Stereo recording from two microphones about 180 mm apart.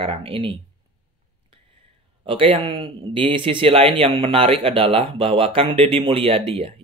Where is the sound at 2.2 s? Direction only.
30° right (ahead or behind).